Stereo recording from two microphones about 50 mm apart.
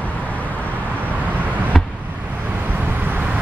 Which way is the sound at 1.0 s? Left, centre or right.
Right.